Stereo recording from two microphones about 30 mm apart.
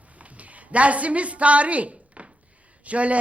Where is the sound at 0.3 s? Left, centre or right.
Right.